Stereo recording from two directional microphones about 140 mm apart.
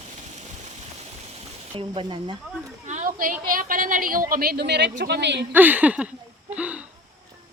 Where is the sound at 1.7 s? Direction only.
35° right (ahead or behind).